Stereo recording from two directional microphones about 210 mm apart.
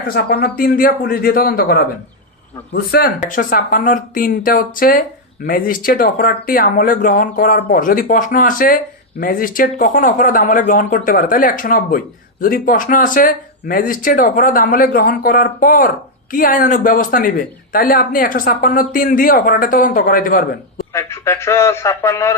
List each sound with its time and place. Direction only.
0.1 s a man's voice: 45° left (ahead or behind)
20.9 s speech: 15° left (ahead or behind)